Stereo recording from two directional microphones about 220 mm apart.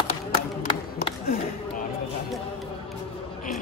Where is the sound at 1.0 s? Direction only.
30° left (ahead or behind).